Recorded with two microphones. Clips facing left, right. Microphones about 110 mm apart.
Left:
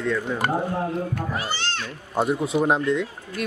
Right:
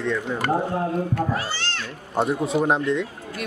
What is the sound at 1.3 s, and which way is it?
Speech, 20° left (ahead or behind).